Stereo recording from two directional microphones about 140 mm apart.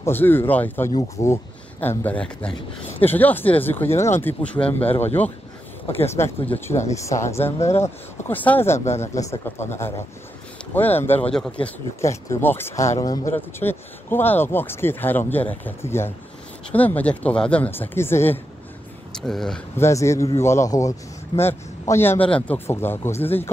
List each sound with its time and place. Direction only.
0.0 s speech: 15° left (ahead or behind)
12.0 s speech: 20° left (ahead or behind)
19.1 s speech: 5° left (ahead or behind)
19.8 s speech: 20° left (ahead or behind)